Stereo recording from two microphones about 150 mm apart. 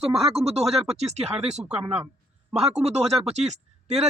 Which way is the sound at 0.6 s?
Centre (ahead or behind).